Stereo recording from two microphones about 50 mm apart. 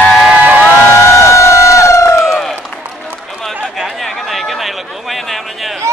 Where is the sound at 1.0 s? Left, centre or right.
Left.